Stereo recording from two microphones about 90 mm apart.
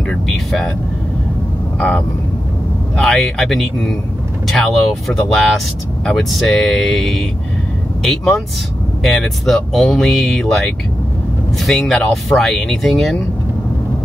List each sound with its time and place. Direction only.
1.8 s speech: 5° left (ahead or behind)